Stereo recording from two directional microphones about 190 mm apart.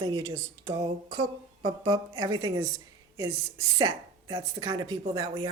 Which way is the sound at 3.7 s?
20° right (ahead or behind).